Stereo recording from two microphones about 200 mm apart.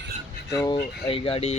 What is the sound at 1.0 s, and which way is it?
Speech, 25° left (ahead or behind).